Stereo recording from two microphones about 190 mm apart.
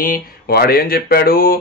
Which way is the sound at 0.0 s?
50° left (ahead or behind).